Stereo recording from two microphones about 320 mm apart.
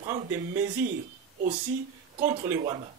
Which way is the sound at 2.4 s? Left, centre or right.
Centre.